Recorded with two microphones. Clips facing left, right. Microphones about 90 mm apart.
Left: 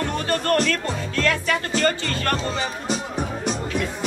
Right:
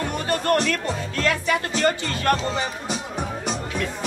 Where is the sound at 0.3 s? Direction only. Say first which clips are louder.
Even; 15° right (ahead or behind).